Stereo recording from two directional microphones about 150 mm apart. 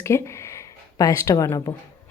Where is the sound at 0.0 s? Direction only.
20° left (ahead or behind).